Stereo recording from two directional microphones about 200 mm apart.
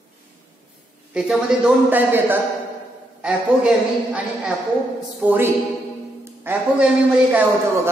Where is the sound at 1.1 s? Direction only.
5° right (ahead or behind).